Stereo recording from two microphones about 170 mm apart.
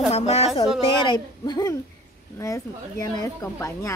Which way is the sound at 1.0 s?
25° left (ahead or behind).